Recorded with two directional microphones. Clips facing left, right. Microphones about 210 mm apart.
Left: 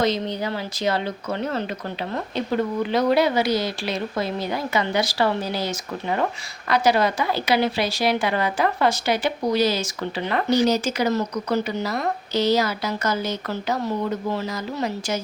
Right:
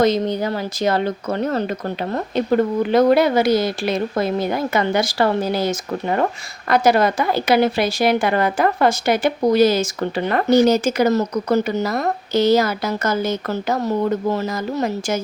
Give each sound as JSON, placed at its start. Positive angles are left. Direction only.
{"t": 0.0, "sound": "speech", "side_deg": -45}